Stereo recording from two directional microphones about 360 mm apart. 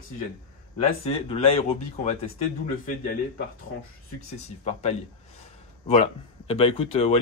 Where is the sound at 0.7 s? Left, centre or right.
Centre.